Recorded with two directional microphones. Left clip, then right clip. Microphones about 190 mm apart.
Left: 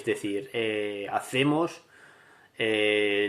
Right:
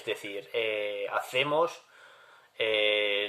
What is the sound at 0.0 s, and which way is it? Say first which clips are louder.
Speech: left 5 dB; 20° left (ahead or behind).